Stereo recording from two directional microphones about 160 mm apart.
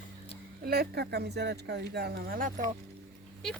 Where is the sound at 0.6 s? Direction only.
75° right (ahead or behind); by 2.6 s 60° right (ahead or behind).